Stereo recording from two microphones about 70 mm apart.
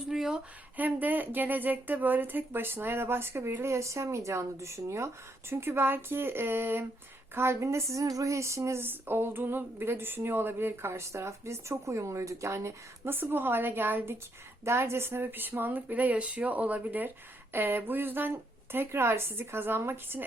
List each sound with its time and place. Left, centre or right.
0.1 s a sound: centre
0.8 s speech: right
8.8 s speech: right
13.1 s speech: right